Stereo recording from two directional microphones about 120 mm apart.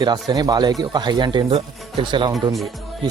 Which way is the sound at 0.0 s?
35° right (ahead or behind).